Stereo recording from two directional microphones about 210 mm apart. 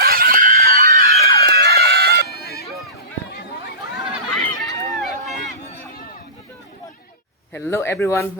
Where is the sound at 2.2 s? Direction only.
50° left (ahead or behind).